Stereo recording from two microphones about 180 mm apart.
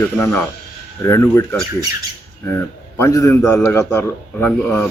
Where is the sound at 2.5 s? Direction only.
15° left (ahead or behind).